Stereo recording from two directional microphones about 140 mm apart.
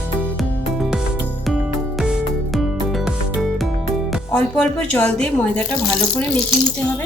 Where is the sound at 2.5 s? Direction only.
Centre (ahead or behind).